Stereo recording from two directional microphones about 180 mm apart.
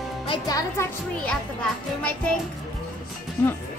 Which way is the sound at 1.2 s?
5° left (ahead or behind).